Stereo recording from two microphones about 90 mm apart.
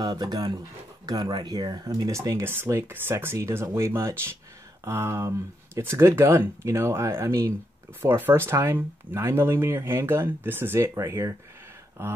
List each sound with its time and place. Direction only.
0.0 s speech: 50° right (ahead or behind)
1.9 s speech: 35° right (ahead or behind)